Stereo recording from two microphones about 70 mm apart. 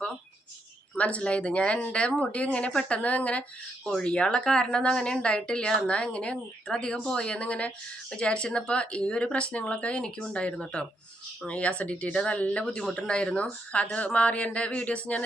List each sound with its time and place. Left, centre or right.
0.9 s speech: centre